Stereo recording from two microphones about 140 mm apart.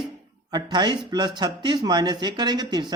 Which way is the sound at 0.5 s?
30° right (ahead or behind).